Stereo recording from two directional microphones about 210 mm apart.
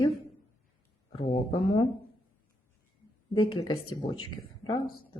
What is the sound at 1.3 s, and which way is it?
Speech, 25° left (ahead or behind).